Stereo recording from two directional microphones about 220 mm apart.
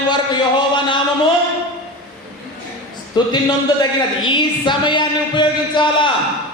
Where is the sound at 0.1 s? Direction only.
20° left (ahead or behind).